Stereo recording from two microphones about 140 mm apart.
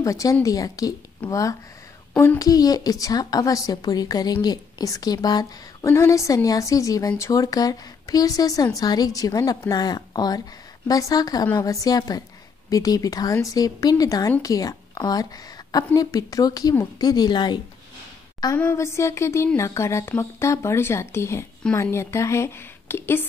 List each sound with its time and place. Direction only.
0.0 s a woman's voice: 25° left (ahead or behind)
18.6 s a woman's voice: 20° left (ahead or behind)